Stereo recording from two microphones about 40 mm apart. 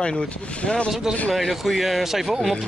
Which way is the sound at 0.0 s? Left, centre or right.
Left.